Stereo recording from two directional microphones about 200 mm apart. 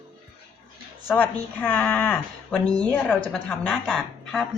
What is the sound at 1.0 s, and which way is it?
A woman's voice, 5° left (ahead or behind).